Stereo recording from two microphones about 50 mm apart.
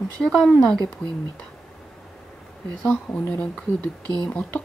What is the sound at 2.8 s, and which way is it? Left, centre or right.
Speech, left.